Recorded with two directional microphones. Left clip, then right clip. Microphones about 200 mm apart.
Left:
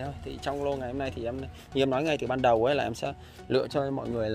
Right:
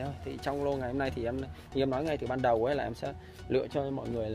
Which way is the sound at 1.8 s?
30° left (ahead or behind).